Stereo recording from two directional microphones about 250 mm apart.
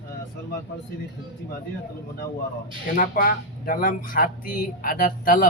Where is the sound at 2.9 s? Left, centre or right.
Left.